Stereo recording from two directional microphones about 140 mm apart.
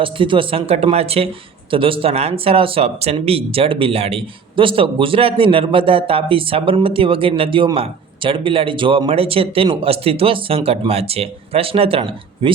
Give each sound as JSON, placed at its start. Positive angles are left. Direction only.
{"t": 0.0, "sound": "speech", "side_deg": -40}